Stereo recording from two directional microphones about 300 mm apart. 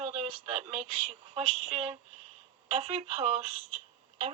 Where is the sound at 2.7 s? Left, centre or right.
Right.